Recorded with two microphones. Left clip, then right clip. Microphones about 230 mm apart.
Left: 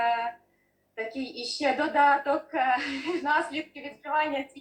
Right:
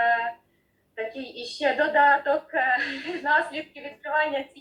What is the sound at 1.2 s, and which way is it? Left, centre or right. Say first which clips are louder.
A woman's voice: right 2 dB; left.